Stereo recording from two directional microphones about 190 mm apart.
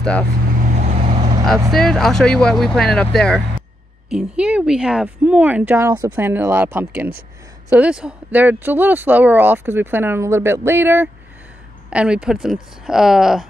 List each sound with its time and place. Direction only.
0.6 s vehicle: 40° right (ahead or behind)
1.7 s speech: centre (ahead or behind)